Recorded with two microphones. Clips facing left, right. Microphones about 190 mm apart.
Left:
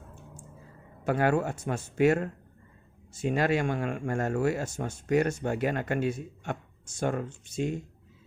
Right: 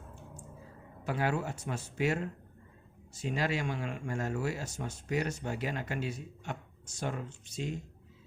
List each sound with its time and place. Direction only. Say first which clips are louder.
1.0 s speech: left 7 dB; 55° left (ahead or behind)